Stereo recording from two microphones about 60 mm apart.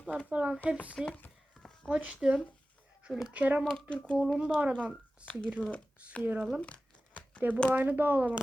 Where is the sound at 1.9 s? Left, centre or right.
Right.